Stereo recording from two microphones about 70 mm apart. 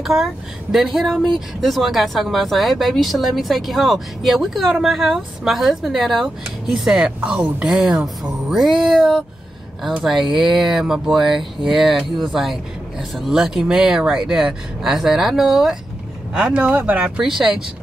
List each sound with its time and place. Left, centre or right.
0.0 s speech: centre
7.1 s speech: centre
16.3 s speech: centre
17.2 s speech: centre